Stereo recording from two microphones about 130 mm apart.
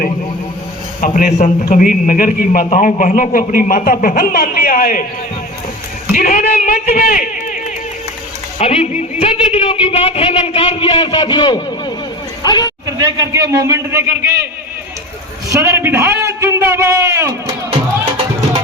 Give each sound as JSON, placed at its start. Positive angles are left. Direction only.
{"t": 1.0, "sound": "a man's voice", "side_deg": 75}
{"t": 1.7, "sound": "speech", "side_deg": 90}
{"t": 2.6, "sound": "speech", "side_deg": 70}
{"t": 6.1, "sound": "a man's voice", "side_deg": 90}
{"t": 8.5, "sound": "speech", "side_deg": 50}
{"t": 13.0, "sound": "a man's voice", "side_deg": -25}
{"t": 15.4, "sound": "a man's voice", "side_deg": -20}